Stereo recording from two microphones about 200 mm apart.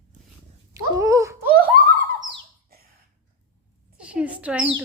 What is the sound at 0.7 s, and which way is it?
Dog, 15° right (ahead or behind).